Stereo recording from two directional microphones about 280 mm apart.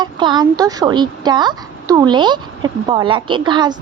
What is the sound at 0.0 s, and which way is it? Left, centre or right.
Speech, centre.